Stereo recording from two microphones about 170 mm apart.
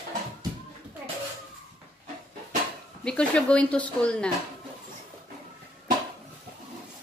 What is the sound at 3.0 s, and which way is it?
Speech, 5° left (ahead or behind).